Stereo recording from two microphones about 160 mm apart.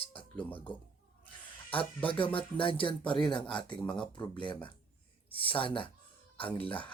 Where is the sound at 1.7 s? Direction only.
35° left (ahead or behind).